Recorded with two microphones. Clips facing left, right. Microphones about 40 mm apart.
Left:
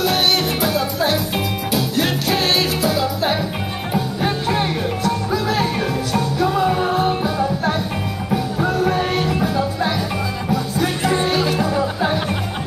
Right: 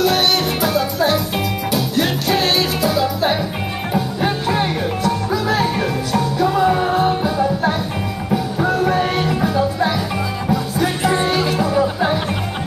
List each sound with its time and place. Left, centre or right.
0.0 s music: centre